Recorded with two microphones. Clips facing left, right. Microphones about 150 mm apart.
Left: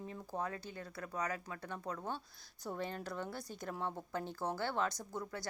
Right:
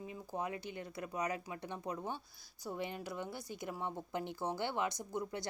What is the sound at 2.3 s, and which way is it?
Speech, centre (ahead or behind).